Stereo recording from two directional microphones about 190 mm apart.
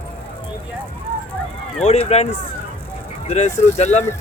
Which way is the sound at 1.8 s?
35° left (ahead or behind).